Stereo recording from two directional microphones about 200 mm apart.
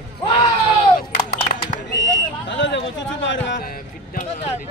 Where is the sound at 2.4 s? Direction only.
65° left (ahead or behind).